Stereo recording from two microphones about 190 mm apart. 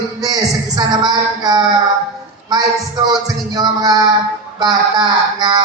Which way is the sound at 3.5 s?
20° right (ahead or behind).